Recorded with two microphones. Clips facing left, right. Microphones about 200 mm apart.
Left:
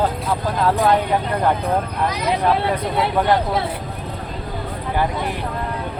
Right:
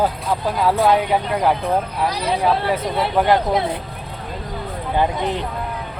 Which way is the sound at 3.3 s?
20° right (ahead or behind).